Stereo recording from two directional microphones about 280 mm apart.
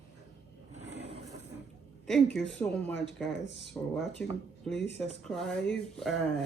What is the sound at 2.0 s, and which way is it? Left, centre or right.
Speech, centre.